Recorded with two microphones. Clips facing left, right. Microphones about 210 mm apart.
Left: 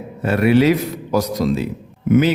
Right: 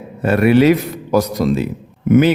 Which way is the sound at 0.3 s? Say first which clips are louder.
Right 3 dB; 55° right (ahead or behind).